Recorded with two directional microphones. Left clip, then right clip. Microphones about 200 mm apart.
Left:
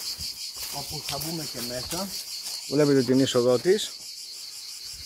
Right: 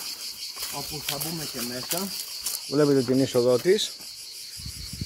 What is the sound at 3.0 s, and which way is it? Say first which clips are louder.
Speech: even; 15° left (ahead or behind).